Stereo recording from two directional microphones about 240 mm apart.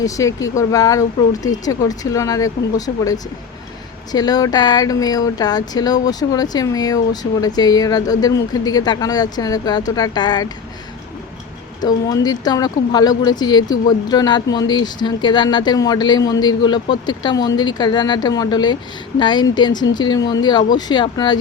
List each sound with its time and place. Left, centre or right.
0.0 s speech: centre
11.8 s speech: centre